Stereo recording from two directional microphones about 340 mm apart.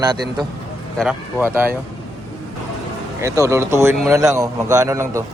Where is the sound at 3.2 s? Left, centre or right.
Centre.